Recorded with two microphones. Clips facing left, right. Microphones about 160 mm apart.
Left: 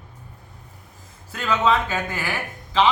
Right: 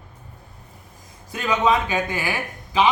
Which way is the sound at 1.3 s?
15° right (ahead or behind).